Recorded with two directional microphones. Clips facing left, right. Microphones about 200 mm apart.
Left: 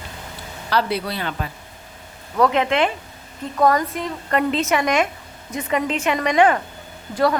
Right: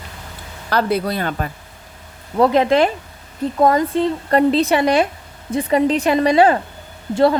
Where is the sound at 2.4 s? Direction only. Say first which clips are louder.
Right 4 dB; 35° right (ahead or behind).